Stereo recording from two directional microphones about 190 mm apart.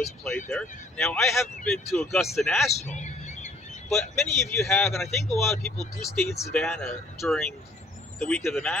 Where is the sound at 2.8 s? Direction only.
40° left (ahead or behind).